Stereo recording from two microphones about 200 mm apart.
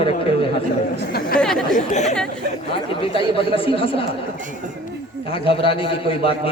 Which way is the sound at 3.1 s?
25° left (ahead or behind).